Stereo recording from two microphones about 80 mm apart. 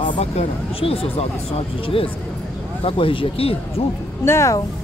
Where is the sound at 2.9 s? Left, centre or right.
Left.